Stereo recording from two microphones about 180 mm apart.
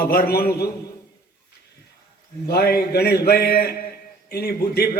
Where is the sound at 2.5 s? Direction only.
60° left (ahead or behind).